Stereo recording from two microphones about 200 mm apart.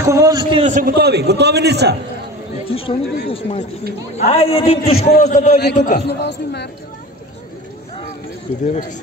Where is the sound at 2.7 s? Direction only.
30° left (ahead or behind).